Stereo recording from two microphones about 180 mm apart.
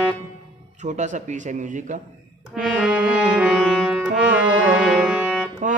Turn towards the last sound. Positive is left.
turn(degrees=-5)  # may be behind; listen again after turning